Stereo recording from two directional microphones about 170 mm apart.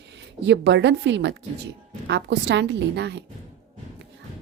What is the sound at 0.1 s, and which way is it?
A woman's voice, 90° right.